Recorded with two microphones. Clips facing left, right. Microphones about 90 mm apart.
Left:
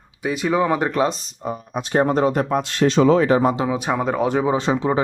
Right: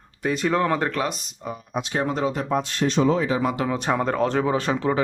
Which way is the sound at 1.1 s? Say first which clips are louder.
Left 5 dB; 30° left (ahead or behind).